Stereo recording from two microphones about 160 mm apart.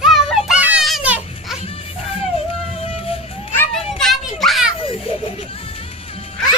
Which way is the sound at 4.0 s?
Centre (ahead or behind).